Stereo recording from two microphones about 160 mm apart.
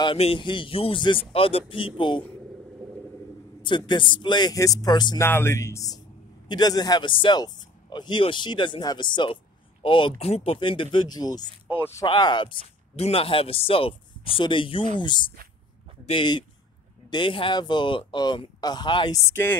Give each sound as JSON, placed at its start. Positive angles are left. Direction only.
{"t": 0.0, "sound": "speech", "side_deg": 35}
{"t": 3.6, "sound": "speech", "side_deg": 30}
{"t": 12.1, "sound": "speech", "side_deg": 30}
{"t": 19.2, "sound": "speech", "side_deg": 15}